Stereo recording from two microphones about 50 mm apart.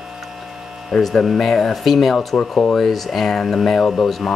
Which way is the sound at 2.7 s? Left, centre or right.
Centre.